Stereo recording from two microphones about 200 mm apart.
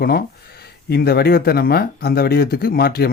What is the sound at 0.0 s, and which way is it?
Speech, 50° left (ahead or behind).